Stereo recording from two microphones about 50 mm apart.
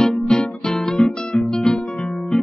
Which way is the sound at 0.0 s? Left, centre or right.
Centre.